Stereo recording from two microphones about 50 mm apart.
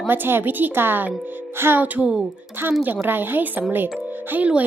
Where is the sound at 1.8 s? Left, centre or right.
Right.